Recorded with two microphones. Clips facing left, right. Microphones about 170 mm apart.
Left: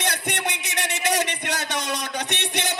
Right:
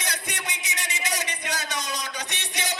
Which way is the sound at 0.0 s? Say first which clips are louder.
Left 7 dB; 60° left (ahead or behind).